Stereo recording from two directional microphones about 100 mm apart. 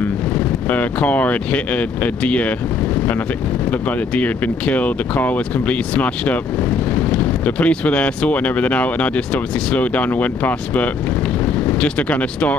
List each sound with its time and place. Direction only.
0.7 s speech: 15° left (ahead or behind)
4.2 s speech: 15° left (ahead or behind)